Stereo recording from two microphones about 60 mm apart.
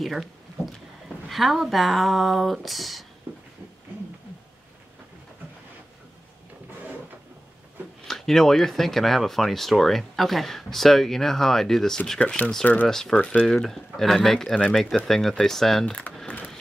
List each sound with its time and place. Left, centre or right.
0.0 s speech: centre
8.1 s speech: centre
13.1 s speech: left
13.6 s speech: centre
15.8 s speech: left